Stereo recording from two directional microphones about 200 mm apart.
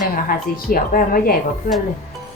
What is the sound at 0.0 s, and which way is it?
A woman's voice, 45° left (ahead or behind).